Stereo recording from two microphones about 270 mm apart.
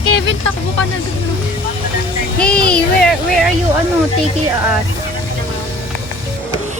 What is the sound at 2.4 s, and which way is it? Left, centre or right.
Speech, centre.